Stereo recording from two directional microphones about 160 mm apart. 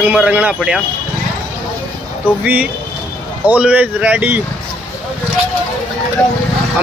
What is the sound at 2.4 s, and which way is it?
Speech, 10° right (ahead or behind).